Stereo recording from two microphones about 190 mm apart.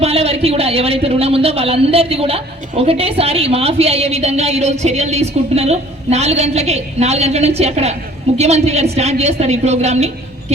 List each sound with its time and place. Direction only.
0.0 s a man's voice: 35° right (ahead or behind)